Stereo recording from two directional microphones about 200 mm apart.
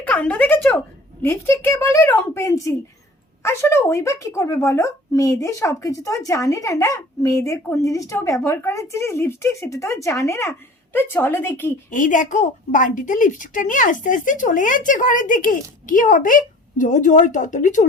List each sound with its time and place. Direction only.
0.0 s speech: 10° left (ahead or behind)
11.9 s a woman's voice: 40° left (ahead or behind)